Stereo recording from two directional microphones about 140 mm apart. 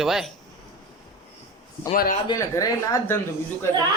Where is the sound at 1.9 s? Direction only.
80° left.